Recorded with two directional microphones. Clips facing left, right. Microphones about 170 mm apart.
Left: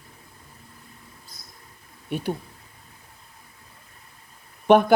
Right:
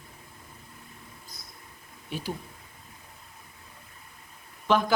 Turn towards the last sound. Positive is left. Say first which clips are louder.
# left 8 dB
turn(degrees=60)  # may be behind; listen again after turning